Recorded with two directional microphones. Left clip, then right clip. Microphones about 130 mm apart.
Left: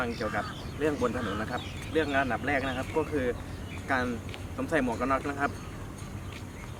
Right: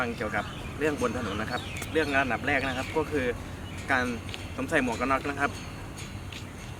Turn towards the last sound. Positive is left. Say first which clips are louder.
# right 2 dB
turn(degrees=-5)  # may be behind; listen again after turning